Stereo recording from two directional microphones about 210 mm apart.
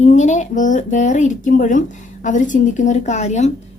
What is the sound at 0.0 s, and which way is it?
A woman's voice, 35° left (ahead or behind).